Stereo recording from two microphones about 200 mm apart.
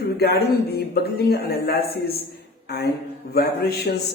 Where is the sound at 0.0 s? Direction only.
55° left (ahead or behind).